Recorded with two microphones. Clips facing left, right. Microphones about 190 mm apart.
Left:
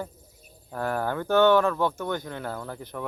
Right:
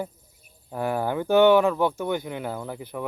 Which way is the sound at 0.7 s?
15° right (ahead or behind).